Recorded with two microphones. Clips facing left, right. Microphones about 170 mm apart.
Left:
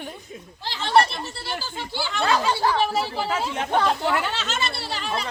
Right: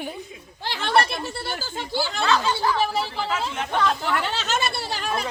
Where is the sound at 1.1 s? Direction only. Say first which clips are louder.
Right 2 dB; 50° right (ahead or behind).